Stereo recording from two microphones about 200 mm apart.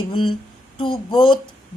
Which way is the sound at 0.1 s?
25° left (ahead or behind).